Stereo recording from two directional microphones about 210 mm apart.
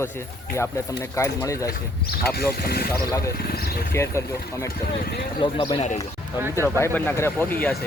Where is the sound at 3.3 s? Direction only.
45° left (ahead or behind).